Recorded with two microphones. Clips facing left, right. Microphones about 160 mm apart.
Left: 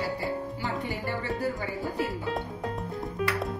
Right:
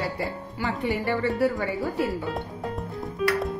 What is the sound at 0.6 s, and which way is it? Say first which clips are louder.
Speech: right 5 dB; 90° right.